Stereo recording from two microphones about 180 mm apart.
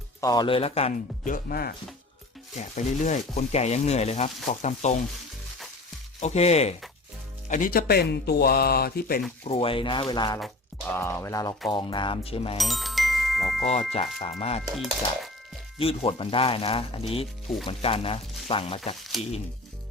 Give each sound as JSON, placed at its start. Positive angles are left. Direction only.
{"t": 0.2, "sound": "speech", "side_deg": 20}
{"t": 2.6, "sound": "speech", "side_deg": 40}
{"t": 6.1, "sound": "speech", "side_deg": 40}
{"t": 7.4, "sound": "speech", "side_deg": 45}
{"t": 9.4, "sound": "speech", "side_deg": 30}
{"t": 10.4, "sound": "music", "side_deg": 10}
{"t": 11.7, "sound": "speech", "side_deg": 25}
{"t": 12.5, "sound": "music", "side_deg": 0}
{"t": 13.7, "sound": "speech", "side_deg": 35}
{"t": 14.8, "sound": "speech", "side_deg": 0}
{"t": 15.8, "sound": "speech", "side_deg": 30}